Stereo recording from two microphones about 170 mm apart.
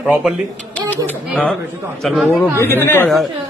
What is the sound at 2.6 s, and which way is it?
Speech, 15° left (ahead or behind).